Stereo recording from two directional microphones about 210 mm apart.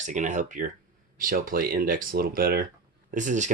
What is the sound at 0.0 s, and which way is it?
Speech, 35° right (ahead or behind).